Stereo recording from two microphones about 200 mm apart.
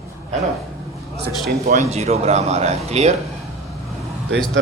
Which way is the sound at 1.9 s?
35° right (ahead or behind).